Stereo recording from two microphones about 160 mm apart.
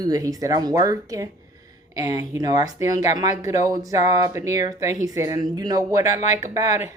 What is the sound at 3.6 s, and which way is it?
Speech, 20° right (ahead or behind).